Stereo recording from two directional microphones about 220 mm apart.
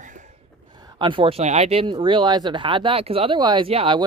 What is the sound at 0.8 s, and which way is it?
Speech, 20° right (ahead or behind).